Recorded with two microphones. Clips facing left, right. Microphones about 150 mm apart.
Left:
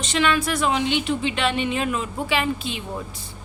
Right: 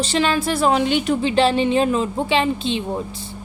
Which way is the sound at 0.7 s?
45° right (ahead or behind).